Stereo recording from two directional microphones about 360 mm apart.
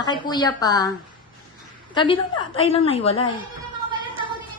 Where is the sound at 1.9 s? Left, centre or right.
Centre.